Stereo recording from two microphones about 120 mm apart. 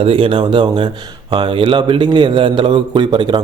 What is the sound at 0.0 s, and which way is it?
A man's voice, 50° right (ahead or behind).